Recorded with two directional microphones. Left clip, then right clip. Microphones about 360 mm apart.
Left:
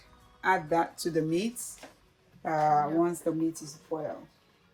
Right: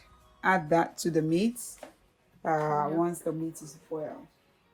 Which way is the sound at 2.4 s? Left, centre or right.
Centre.